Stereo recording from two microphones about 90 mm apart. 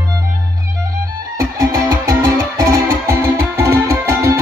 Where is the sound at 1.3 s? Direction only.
40° right (ahead or behind).